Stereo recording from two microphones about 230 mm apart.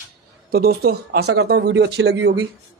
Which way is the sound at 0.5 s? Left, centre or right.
Right.